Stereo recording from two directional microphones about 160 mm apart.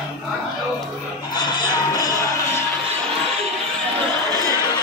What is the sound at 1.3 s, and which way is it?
Music, 25° left (ahead or behind).